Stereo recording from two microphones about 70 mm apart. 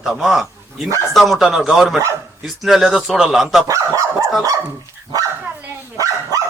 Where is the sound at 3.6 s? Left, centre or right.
Right.